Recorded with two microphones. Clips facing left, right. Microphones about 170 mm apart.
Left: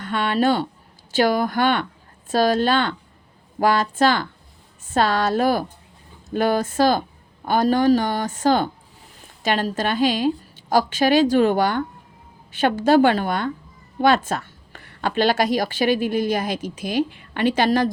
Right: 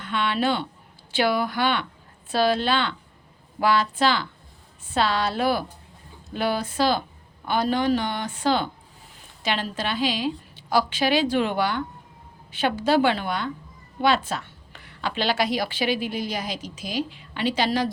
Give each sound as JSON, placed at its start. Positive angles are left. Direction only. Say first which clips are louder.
{"t": 0.0, "sound": "a woman's voice", "louder": "left 4 dB", "side_deg": 45}